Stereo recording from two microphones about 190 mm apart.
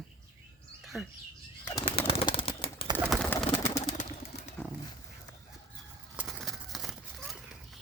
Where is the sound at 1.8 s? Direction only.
30° left (ahead or behind).